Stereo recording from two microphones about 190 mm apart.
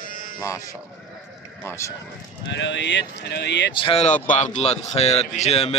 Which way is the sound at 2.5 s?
70° left (ahead or behind).